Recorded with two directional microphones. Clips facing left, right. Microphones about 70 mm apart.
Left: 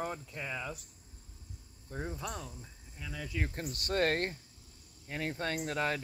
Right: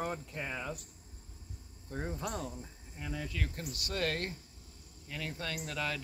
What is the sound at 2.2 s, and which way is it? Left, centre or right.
Speech, right.